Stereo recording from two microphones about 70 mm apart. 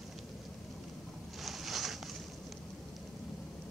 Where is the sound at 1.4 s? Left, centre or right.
Centre.